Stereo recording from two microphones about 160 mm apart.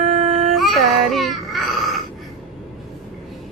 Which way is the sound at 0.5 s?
Centre (ahead or behind).